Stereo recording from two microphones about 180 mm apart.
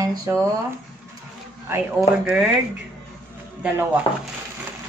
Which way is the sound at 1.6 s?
10° right (ahead or behind).